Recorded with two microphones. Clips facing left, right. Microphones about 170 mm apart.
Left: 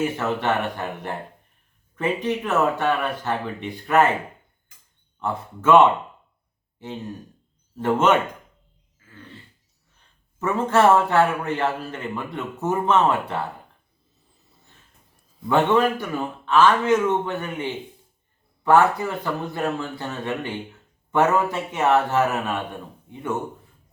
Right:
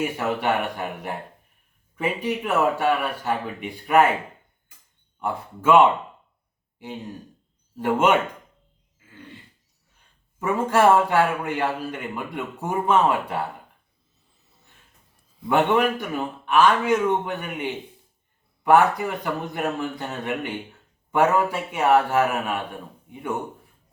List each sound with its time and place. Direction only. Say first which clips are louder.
0.0 s a man's voice: left 1 dB; 10° right (ahead or behind)
5.2 s a man's voice: left 1 dB; 10° right (ahead or behind)
10.4 s a man's voice: even; 10° right (ahead or behind)
15.4 s a man's voice: left 1 dB; 15° right (ahead or behind)